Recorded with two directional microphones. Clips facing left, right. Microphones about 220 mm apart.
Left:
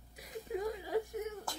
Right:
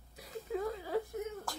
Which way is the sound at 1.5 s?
Centre (ahead or behind).